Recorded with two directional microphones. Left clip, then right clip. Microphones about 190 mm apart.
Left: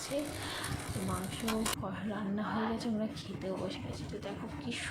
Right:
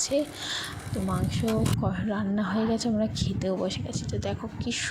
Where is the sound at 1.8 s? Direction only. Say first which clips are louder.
Right 9 dB; 40° right (ahead or behind).